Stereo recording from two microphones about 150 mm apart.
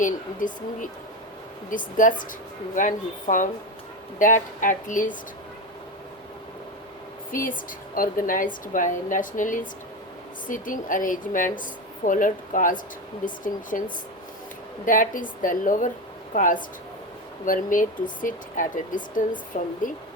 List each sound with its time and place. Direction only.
0.0 s a woman's voice: 60° left (ahead or behind)
7.3 s a woman's voice: 65° left (ahead or behind)
14.8 s a woman's voice: 65° left (ahead or behind)